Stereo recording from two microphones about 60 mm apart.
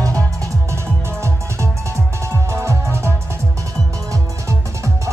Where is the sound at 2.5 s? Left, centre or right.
Right.